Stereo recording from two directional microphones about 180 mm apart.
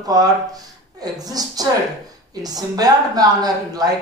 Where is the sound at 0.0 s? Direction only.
20° right (ahead or behind).